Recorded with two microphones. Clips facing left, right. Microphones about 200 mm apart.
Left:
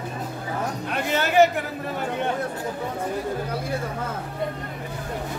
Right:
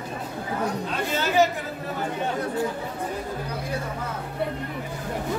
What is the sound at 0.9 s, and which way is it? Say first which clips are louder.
Chatter: left 4 dB; 65° left (ahead or behind).